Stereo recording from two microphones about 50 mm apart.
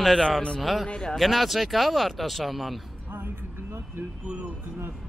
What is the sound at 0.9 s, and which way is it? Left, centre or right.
Speech, centre.